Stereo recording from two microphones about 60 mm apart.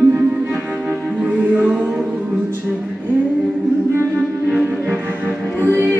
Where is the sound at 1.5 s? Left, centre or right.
Right.